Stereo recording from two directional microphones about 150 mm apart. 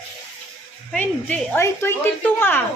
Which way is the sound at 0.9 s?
10° left (ahead or behind).